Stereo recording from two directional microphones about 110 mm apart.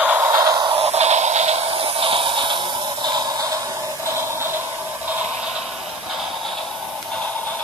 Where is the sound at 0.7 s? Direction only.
65° right (ahead or behind); by 1.7 s 85° right.